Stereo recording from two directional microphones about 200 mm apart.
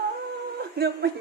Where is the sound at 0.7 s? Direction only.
55° right (ahead or behind).